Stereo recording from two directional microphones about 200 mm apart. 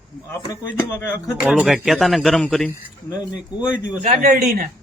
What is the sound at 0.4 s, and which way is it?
Speech, 15° left (ahead or behind).